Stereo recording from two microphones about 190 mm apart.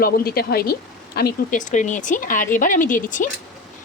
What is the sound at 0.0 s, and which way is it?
Speech, 55° left (ahead or behind).